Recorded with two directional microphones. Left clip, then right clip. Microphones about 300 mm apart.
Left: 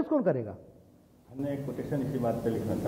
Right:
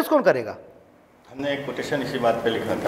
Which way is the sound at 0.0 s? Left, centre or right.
Centre.